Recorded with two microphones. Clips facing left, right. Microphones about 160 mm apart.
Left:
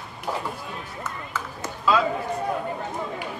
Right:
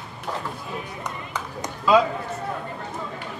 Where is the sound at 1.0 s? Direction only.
15° right (ahead or behind).